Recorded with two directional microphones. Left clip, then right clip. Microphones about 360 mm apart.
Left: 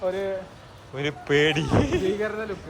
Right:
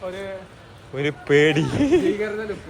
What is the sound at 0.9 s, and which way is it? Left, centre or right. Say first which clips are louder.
Speech: right 4 dB; centre.